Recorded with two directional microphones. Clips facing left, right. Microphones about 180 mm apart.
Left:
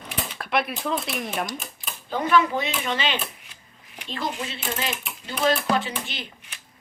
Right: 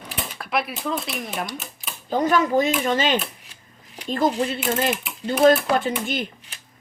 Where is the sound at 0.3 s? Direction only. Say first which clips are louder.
Even; centre (ahead or behind).